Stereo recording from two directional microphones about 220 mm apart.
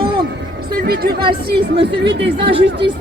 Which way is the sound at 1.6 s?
20° right (ahead or behind).